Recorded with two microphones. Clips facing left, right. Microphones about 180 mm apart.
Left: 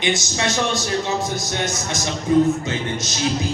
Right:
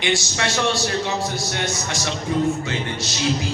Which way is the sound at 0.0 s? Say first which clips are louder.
Left 1 dB; 20° left (ahead or behind).